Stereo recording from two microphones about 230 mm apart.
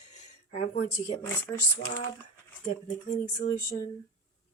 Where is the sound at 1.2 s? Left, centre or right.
Centre.